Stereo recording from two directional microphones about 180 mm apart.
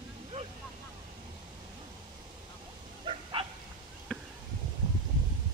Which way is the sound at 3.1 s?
30° right (ahead or behind).